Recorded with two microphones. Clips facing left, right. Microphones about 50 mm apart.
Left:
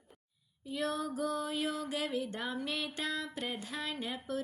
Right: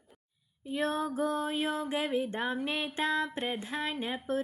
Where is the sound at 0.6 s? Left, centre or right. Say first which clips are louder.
Right 4 dB; right.